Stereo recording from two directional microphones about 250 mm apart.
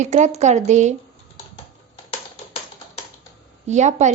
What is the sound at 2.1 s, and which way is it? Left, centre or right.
Music, left.